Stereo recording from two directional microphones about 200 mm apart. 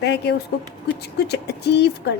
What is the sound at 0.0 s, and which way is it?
A woman's voice, 55° left (ahead or behind).